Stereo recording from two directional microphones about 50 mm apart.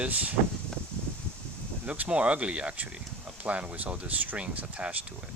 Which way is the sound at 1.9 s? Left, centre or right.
Right.